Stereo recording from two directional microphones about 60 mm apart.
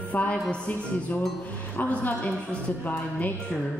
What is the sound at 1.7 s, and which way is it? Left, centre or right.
A woman's voice, left.